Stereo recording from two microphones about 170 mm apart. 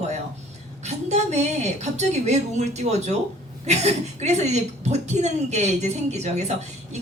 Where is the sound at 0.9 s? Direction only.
40° right (ahead or behind).